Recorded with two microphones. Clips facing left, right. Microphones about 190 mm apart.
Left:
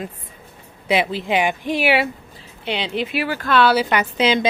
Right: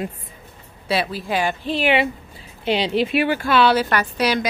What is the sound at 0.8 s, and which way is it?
Speech, 15° left (ahead or behind).